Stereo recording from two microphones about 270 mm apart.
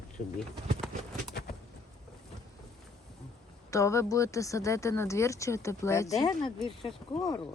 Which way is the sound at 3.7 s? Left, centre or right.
Centre.